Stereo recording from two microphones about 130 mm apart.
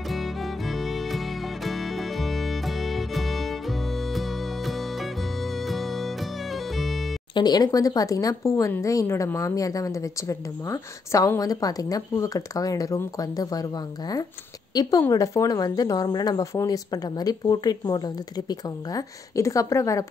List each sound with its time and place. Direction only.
0.1 s music: centre (ahead or behind)
7.3 s speech: 30° left (ahead or behind)